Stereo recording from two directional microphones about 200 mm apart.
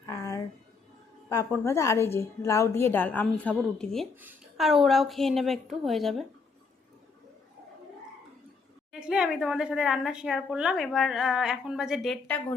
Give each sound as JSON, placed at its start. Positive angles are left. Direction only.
{"t": 0.0, "sound": "a sound", "side_deg": 15}
{"t": 1.3, "sound": "a woman's voice", "side_deg": 15}
{"t": 4.1, "sound": "a woman's voice", "side_deg": -10}
{"t": 8.9, "sound": "a woman's voice", "side_deg": -5}